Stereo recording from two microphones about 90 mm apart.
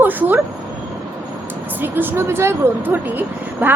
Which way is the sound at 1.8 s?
20° right (ahead or behind).